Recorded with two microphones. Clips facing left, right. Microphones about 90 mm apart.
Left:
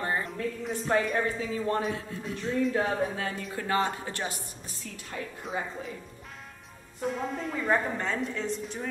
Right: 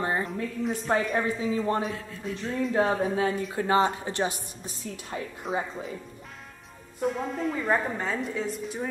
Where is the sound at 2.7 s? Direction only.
30° right (ahead or behind).